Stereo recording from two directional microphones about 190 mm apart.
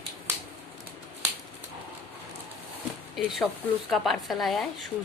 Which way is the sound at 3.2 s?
Centre (ahead or behind).